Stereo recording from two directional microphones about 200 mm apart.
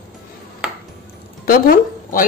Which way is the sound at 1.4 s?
45° left (ahead or behind).